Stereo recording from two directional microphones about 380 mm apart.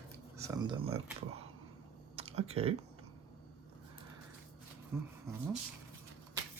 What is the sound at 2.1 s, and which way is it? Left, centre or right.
Typing, centre.